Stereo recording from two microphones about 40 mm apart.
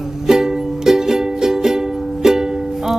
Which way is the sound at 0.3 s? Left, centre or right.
Centre.